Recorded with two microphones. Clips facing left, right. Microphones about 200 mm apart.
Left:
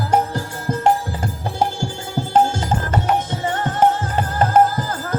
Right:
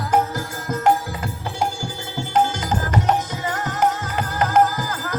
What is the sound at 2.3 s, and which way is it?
Music, 25° left (ahead or behind).